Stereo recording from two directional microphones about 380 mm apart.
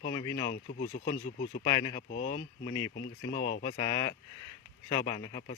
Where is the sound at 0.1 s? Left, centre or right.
Centre.